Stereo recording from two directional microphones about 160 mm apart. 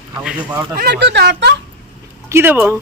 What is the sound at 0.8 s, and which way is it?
Speech, 90° right.